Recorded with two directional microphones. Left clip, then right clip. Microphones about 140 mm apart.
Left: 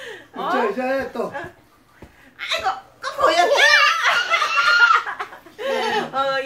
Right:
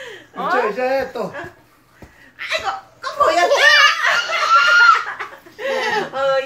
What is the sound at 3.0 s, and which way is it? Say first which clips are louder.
Chuckle: right 2 dB; 15° left (ahead or behind).